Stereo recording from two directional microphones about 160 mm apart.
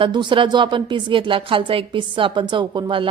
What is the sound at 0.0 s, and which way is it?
A woman's voice, 30° right (ahead or behind).